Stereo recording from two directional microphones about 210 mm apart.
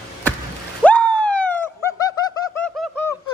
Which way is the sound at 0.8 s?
5° left (ahead or behind).